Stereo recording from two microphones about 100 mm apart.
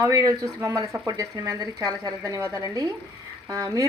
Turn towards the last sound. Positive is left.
turn(degrees=-35)  # may be behind; listen again after turning